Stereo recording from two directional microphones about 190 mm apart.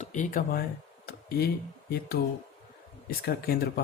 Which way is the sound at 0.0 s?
40° left (ahead or behind).